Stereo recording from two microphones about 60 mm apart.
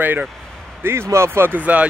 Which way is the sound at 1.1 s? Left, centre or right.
Right.